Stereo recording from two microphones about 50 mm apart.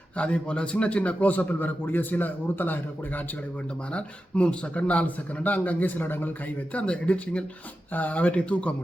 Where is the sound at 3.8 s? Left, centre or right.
Left.